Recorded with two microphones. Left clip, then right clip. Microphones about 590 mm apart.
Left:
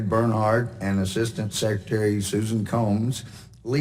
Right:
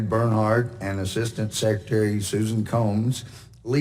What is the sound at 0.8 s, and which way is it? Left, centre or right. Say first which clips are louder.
Speech: left 1 dB; centre.